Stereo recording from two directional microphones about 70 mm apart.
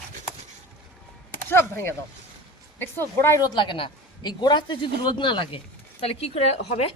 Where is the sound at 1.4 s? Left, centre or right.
Left.